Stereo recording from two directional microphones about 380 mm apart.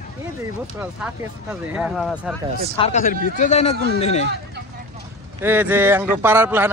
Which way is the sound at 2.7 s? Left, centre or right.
Centre.